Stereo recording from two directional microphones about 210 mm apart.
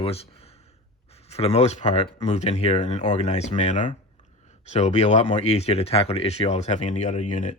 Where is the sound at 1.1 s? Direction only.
30° left (ahead or behind).